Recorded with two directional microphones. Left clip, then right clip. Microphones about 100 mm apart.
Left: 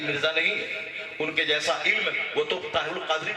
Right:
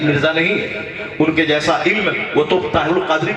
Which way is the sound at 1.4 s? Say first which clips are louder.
Right 7 dB; 15° left (ahead or behind).